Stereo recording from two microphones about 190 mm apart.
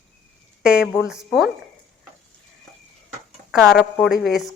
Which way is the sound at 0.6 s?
5° right (ahead or behind).